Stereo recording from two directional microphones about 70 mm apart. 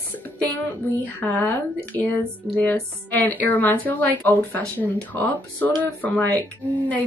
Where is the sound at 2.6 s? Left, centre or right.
Left.